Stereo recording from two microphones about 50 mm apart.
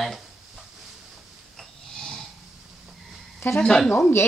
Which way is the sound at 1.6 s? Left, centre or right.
Centre.